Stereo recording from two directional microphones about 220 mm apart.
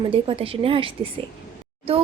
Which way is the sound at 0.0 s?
25° right (ahead or behind).